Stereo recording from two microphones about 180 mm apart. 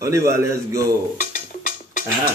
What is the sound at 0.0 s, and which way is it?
Speech, 15° right (ahead or behind).